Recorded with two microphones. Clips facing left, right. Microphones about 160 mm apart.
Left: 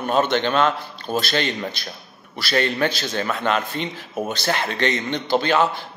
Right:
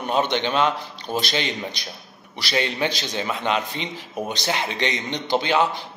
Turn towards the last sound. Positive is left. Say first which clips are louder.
# left 2 dB
turn(degrees=-15)  # may be behind; listen again after turning